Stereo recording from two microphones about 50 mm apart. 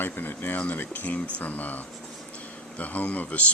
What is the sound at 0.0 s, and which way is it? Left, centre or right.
Speech, left.